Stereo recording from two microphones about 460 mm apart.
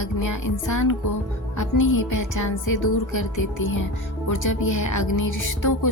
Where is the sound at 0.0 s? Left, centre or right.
Left.